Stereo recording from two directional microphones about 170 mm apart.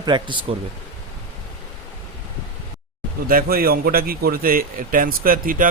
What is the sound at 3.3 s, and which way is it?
A man's voice, 60° right (ahead or behind).